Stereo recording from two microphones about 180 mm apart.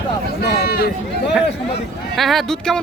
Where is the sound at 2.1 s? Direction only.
Centre (ahead or behind).